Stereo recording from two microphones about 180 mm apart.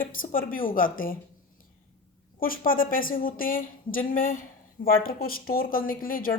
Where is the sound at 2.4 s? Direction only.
50° left (ahead or behind).